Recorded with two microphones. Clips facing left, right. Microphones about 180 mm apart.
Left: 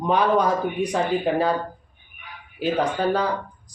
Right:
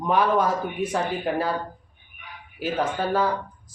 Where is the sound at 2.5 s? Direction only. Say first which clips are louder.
Left 3 dB; 5° right (ahead or behind).